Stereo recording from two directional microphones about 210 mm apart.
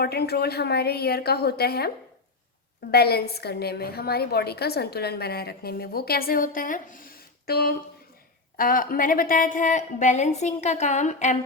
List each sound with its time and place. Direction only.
0.0 s a woman's voice: 50° left (ahead or behind)
2.9 s a woman's voice: 50° left (ahead or behind); by 11.3 s 35° left (ahead or behind)